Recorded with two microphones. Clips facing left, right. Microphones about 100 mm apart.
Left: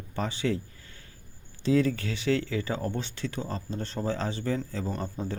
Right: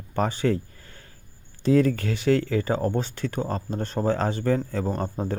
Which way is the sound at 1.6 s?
45° right (ahead or behind).